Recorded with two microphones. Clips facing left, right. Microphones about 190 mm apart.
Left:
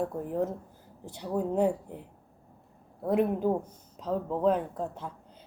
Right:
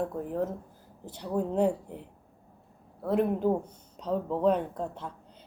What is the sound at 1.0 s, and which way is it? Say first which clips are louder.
Speech: even; 10° left (ahead or behind).